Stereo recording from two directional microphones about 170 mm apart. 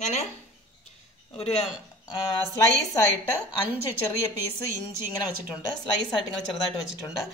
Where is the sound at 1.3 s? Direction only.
35° left (ahead or behind).